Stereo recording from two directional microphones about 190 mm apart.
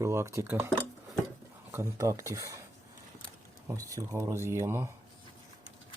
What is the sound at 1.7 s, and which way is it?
Speech, 15° right (ahead or behind).